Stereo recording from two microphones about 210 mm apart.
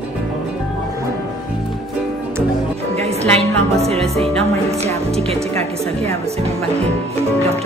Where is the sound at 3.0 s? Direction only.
30° right (ahead or behind).